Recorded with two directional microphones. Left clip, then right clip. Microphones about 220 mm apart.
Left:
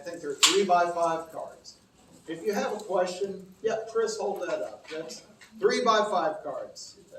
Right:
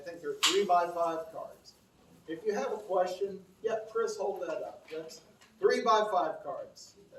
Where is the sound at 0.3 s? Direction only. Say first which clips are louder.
Left 5 dB; 10° right (ahead or behind).